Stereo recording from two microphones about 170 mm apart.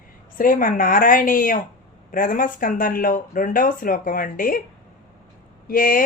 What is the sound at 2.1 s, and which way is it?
Speech, 55° left (ahead or behind).